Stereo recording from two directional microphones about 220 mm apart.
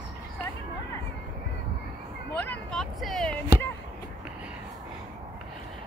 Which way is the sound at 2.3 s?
5° left (ahead or behind).